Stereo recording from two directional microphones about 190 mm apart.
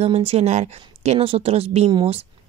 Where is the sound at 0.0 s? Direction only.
35° right (ahead or behind).